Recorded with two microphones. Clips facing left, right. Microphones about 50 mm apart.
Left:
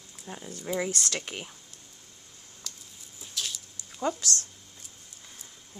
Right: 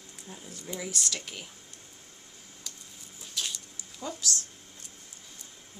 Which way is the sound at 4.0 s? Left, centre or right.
Left.